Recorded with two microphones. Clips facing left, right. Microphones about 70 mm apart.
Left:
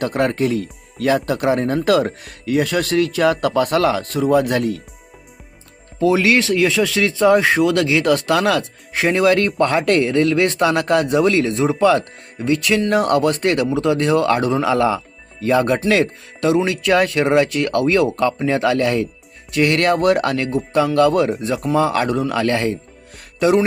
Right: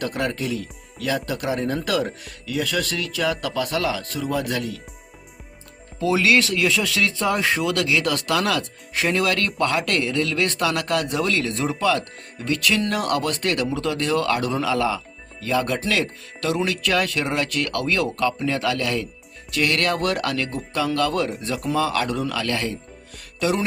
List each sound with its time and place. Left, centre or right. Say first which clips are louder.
0.0 s speech: left 7 dB; left
6.0 s speech: left 4 dB; left
23.4 s music: left 8 dB; left